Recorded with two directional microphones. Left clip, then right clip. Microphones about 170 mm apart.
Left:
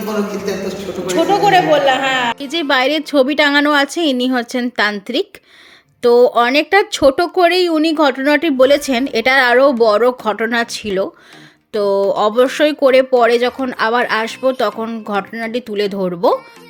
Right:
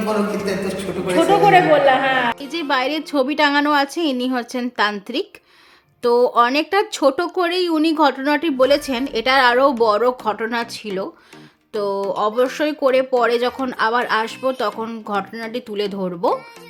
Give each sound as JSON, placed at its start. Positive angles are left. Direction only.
{"t": 0.5, "sound": "a man's voice", "side_deg": -90}
{"t": 1.0, "sound": "a woman's voice", "side_deg": 0}
{"t": 2.4, "sound": "speech", "side_deg": 25}
{"t": 6.0, "sound": "speech", "side_deg": 15}